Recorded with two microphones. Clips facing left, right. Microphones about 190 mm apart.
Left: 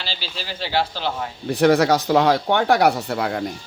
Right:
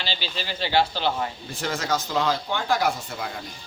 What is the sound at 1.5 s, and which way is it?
Speech, 65° left (ahead or behind).